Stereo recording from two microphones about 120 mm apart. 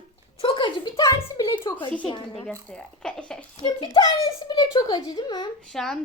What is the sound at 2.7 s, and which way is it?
Speech, 5° left (ahead or behind).